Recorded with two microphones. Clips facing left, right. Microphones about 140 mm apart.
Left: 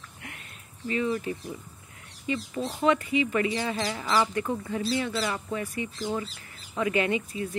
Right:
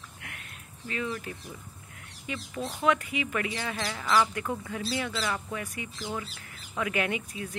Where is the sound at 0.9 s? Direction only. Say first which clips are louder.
Left 6 dB; 5° left (ahead or behind).